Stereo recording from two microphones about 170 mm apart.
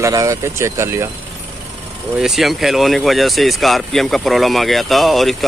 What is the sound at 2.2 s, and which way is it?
Speech, centre (ahead or behind).